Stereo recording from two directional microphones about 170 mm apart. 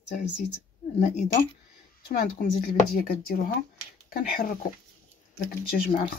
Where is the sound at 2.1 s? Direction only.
60° left (ahead or behind).